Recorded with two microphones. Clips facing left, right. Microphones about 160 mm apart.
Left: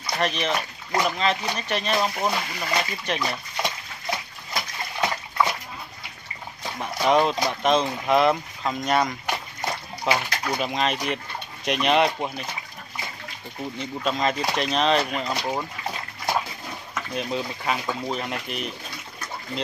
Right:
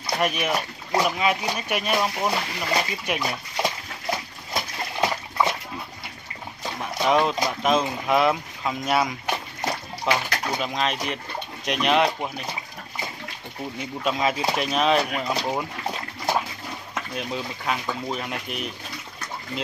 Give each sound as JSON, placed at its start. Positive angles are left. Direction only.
{"t": 0.2, "sound": "speech", "side_deg": -10}
{"t": 5.0, "sound": "bathtub", "side_deg": -25}
{"t": 6.8, "sound": "speech", "side_deg": 0}
{"t": 10.1, "sound": "speech", "side_deg": 0}
{"t": 13.7, "sound": "speech", "side_deg": -5}
{"t": 17.1, "sound": "speech", "side_deg": 0}